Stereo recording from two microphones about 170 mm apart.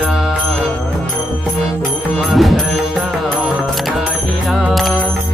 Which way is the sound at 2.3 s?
Centre (ahead or behind).